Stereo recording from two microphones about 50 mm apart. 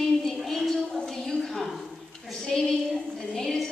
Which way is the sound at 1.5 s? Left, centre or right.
Centre.